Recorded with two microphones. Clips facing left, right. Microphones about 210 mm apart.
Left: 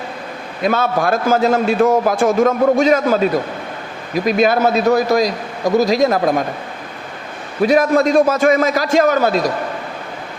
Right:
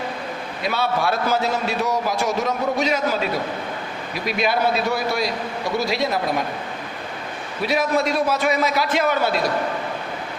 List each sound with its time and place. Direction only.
0.6 s a man's voice: 50° left (ahead or behind)
7.6 s a man's voice: 45° left (ahead or behind)